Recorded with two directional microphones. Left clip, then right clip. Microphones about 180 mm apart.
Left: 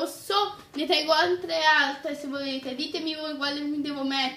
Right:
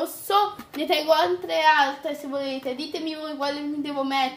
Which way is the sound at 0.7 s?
20° left (ahead or behind).